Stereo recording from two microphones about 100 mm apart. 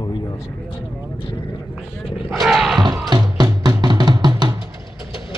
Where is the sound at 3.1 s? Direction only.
45° right (ahead or behind).